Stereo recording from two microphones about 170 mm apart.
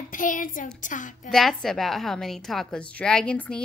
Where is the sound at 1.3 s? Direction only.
Centre (ahead or behind).